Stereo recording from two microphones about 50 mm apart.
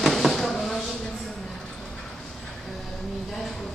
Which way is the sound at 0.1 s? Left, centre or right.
Centre.